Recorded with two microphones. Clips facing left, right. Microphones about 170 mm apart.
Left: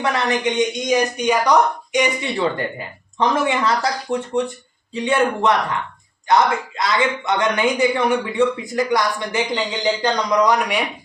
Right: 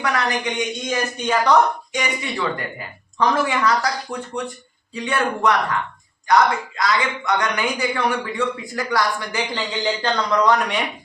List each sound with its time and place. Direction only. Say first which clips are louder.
0.0 s speech: left 3 dB; 25° left (ahead or behind)